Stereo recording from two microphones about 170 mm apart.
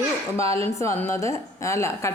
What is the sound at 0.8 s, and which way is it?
Speech, 15° left (ahead or behind).